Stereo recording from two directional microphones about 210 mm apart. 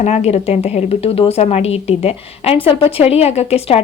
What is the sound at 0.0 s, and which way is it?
A woman's voice, 30° left (ahead or behind).